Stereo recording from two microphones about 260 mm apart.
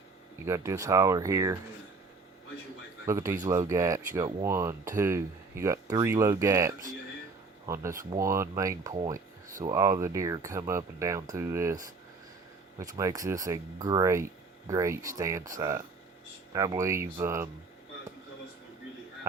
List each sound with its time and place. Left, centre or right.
0.4 s speech: centre
3.1 s speech: centre
12.8 s speech: centre